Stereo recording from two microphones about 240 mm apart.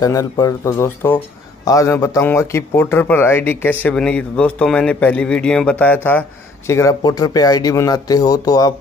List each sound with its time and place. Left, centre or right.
0.0 s speech: centre